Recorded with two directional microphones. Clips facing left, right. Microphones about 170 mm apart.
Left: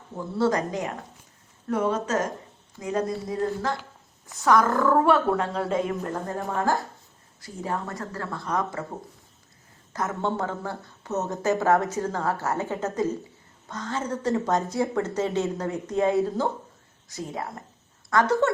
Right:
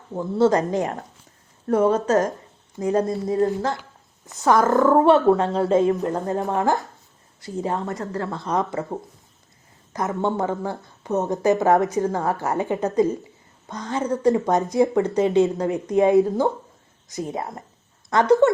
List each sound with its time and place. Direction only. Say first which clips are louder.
0.3 s speech: right 6 dB; 25° right (ahead or behind)
1.6 s speech: right 7 dB; 40° right (ahead or behind); by 8.8 s 20° right (ahead or behind)
9.9 s a woman's voice: right 4 dB; 15° right (ahead or behind)